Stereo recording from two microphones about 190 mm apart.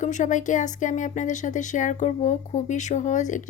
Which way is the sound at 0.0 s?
40° left (ahead or behind).